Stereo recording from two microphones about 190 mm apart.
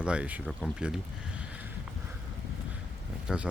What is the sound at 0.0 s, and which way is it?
Speech, 5° right (ahead or behind).